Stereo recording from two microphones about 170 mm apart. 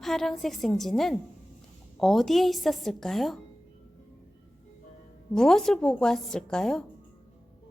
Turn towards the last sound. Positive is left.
turn(degrees=5)  # may be behind; listen again after turning